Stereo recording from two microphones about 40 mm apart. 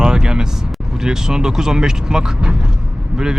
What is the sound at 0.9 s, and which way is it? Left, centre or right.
Speech, centre.